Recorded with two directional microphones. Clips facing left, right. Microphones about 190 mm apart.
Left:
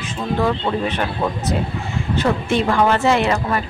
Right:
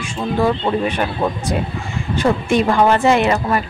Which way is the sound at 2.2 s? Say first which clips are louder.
Right 3 dB; 15° right (ahead or behind).